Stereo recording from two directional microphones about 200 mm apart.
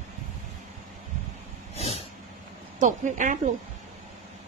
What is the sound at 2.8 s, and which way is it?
Speech, 40° right (ahead or behind).